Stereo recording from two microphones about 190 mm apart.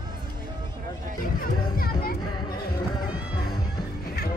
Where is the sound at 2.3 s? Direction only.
20° left (ahead or behind).